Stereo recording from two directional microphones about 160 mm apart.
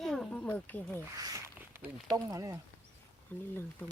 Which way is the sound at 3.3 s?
10° left (ahead or behind).